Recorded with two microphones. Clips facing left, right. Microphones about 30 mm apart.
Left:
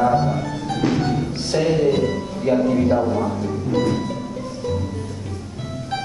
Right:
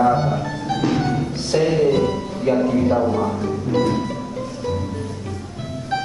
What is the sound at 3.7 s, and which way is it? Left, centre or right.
Music, centre.